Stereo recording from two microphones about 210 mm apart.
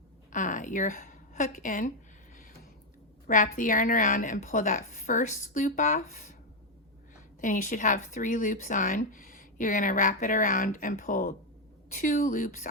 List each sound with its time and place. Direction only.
0.3 s a sound: 35° left (ahead or behind)
3.2 s speech: 40° left (ahead or behind)
7.4 s speech: 40° left (ahead or behind)